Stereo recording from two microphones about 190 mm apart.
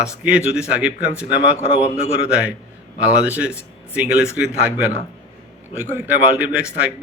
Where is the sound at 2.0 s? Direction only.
35° left (ahead or behind).